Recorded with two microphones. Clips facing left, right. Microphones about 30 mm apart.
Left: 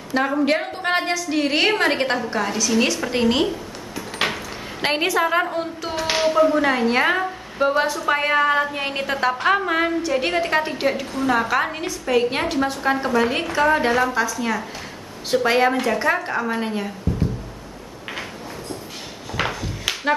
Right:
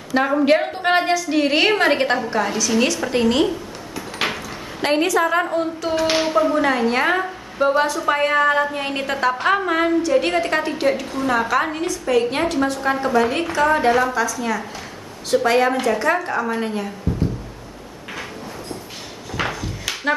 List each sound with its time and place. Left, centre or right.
0.1 s a woman's voice: centre
3.4 s a sound: centre
4.8 s a woman's voice: centre
14.1 s a woman's voice: centre